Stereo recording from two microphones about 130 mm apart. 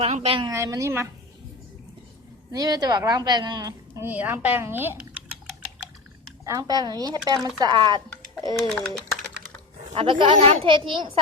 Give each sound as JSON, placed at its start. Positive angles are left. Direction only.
{"t": 0.0, "sound": "a woman's voice", "side_deg": -55}
{"t": 0.5, "sound": "a woman's voice", "side_deg": -25}
{"t": 2.5, "sound": "speech", "side_deg": -30}
{"t": 4.0, "sound": "a woman's voice", "side_deg": -15}
{"t": 6.4, "sound": "speech", "side_deg": -25}
{"t": 8.6, "sound": "speech", "side_deg": 5}
{"t": 9.9, "sound": "speech", "side_deg": -40}